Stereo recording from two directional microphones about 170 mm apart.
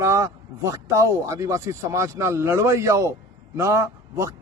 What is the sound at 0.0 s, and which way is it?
A man's voice, 15° right (ahead or behind).